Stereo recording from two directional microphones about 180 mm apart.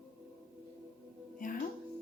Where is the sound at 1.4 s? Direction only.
50° left (ahead or behind).